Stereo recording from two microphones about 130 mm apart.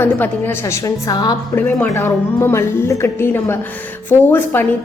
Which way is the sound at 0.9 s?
30° left (ahead or behind).